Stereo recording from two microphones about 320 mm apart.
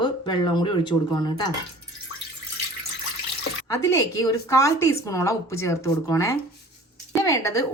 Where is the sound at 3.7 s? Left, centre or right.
Centre.